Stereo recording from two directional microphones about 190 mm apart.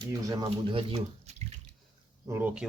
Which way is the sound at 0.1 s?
20° right (ahead or behind).